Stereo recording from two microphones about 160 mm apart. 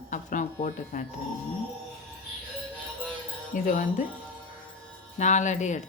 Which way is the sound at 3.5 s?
55° left (ahead or behind).